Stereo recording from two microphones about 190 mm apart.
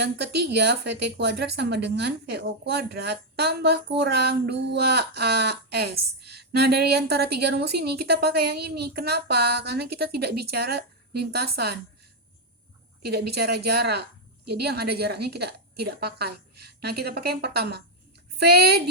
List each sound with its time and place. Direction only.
0.0 s a woman's voice: 60° right (ahead or behind)
13.1 s a woman's voice: 55° right (ahead or behind)